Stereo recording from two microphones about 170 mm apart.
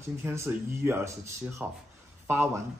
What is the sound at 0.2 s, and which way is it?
Speech, 15° right (ahead or behind).